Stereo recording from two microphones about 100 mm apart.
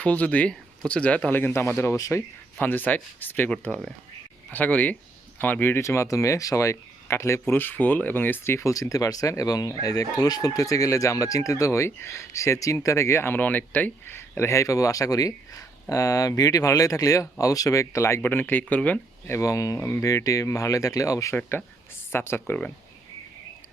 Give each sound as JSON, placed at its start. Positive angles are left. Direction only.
{"t": 0.0, "sound": "speech", "side_deg": 15}
{"t": 2.6, "sound": "speech", "side_deg": 20}
{"t": 19.3, "sound": "speech", "side_deg": 30}
{"t": 20.1, "sound": "speech", "side_deg": 35}